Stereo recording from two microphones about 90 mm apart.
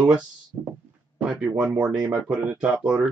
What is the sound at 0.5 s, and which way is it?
Heart sounds, 25° right (ahead or behind).